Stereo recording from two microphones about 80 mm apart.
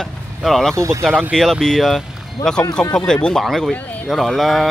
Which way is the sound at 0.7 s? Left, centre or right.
Right.